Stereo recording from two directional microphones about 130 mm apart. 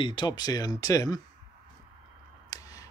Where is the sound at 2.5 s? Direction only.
25° left (ahead or behind).